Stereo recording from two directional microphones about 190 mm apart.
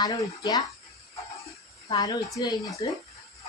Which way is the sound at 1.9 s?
20° left (ahead or behind).